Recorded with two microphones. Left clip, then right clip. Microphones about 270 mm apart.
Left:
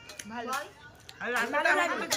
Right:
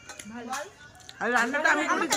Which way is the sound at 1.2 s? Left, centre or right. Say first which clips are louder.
Right 4 dB; centre.